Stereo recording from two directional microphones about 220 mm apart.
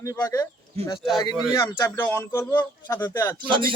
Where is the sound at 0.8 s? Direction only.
25° right (ahead or behind).